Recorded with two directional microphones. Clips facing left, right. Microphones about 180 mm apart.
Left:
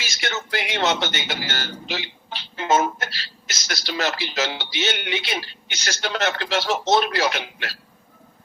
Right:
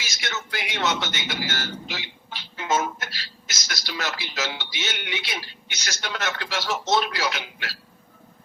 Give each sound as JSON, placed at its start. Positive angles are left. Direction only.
{"t": 0.0, "sound": "a man's voice", "side_deg": 30}
{"t": 6.9, "sound": "speech", "side_deg": 60}